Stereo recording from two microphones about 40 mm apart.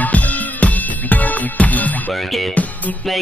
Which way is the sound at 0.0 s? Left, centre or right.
Left.